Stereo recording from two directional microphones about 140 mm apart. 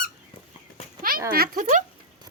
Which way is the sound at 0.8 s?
45° left (ahead or behind).